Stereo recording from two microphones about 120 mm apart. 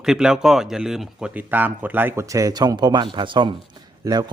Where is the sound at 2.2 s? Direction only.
30° right (ahead or behind); by 3.5 s 45° right (ahead or behind).